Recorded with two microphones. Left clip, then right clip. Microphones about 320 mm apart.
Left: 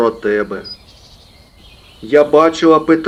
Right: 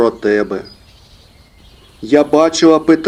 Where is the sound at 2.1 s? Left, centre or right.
Right.